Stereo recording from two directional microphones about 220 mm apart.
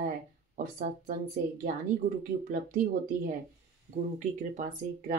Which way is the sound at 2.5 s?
35° right (ahead or behind).